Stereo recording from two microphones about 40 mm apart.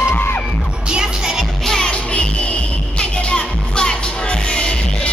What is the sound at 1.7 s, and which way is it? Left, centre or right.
Music, centre.